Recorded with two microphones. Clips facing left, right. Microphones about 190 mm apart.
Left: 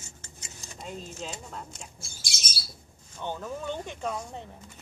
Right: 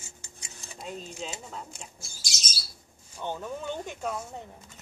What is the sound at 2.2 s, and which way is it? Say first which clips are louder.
Bird: left 1 dB; 55° left (ahead or behind).